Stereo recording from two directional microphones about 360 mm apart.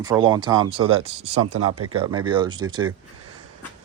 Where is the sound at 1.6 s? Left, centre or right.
Right.